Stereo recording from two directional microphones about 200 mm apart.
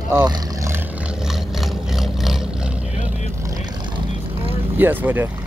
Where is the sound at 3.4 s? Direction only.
15° right (ahead or behind).